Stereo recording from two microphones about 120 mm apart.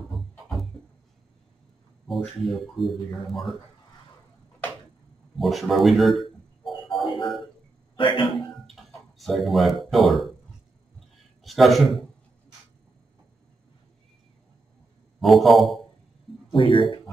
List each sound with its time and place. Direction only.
2.0 s speech: centre (ahead or behind)
5.3 s speech: centre (ahead or behind)
6.9 s music: 45° left (ahead or behind)
7.9 s a sound: 45° left (ahead or behind)
9.2 s speech: centre (ahead or behind)
11.4 s a man's voice: centre (ahead or behind)
15.1 s speech: centre (ahead or behind)
16.5 s speech: 45° left (ahead or behind)